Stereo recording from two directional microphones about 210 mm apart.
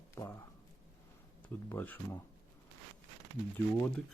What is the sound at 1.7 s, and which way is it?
Speech, 10° left (ahead or behind).